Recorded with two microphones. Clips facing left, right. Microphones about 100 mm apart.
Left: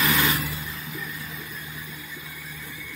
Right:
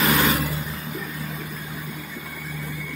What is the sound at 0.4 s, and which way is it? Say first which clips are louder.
Vehicle: right 5 dB; 45° right (ahead or behind).